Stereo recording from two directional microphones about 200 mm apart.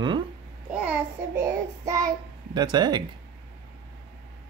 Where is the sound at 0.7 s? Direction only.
10° right (ahead or behind).